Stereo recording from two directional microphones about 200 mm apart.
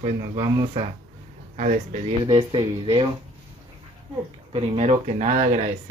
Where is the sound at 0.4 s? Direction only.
20° right (ahead or behind).